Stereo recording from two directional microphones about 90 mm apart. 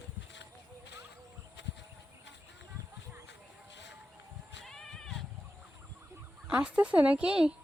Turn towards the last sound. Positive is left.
turn(degrees=-10)  # may be behind; listen again after turning